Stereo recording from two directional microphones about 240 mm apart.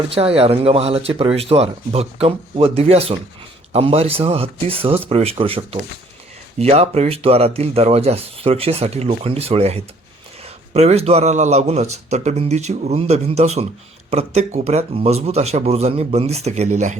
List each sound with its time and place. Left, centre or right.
0.1 s speech: right